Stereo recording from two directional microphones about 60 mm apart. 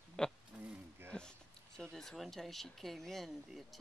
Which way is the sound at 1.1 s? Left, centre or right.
Centre.